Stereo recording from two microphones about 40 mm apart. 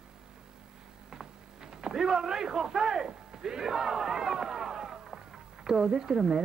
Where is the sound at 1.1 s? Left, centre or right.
Centre.